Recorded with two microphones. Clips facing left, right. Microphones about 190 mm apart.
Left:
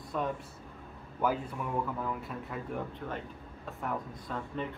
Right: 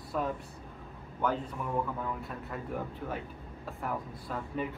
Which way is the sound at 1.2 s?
5° left (ahead or behind).